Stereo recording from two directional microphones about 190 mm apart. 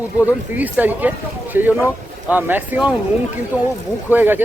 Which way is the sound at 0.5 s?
10° right (ahead or behind).